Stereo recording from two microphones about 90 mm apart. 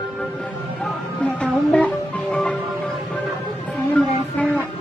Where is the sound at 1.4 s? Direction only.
15° left (ahead or behind).